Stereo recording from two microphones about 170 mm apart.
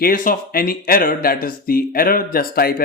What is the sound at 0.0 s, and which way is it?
Speech, 55° left (ahead or behind).